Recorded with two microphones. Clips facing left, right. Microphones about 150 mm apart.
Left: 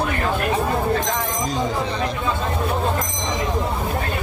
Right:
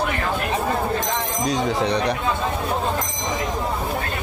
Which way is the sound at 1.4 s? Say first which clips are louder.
Right 5 dB; 70° right (ahead or behind).